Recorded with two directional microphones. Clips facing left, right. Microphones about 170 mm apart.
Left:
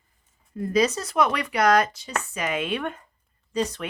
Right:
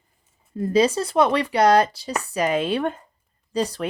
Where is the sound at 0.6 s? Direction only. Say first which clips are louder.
Right 4 dB; 30° right (ahead or behind).